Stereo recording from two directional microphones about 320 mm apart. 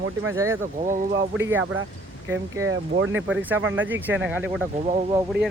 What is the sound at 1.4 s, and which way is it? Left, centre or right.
Speech, centre.